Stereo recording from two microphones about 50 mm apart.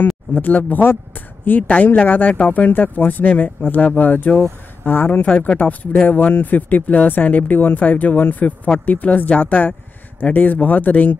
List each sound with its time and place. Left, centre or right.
0.3 s speech: left
1.6 s speech: left
2.0 s speech: left
5.2 s speech: left
6.0 s speech: left